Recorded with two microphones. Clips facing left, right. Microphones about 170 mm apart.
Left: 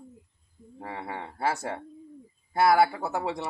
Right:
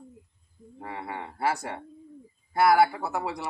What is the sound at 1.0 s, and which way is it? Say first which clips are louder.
A man's voice: right 1 dB; 30° left (ahead or behind).